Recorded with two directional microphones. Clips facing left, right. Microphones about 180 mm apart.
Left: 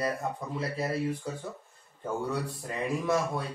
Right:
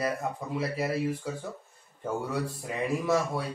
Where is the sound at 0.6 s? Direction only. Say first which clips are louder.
Right 2 dB; 10° right (ahead or behind).